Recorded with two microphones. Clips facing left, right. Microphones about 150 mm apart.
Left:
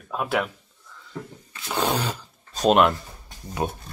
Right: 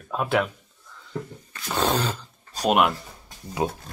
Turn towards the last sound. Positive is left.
turn(degrees=-20)  # may be behind; listen again after turning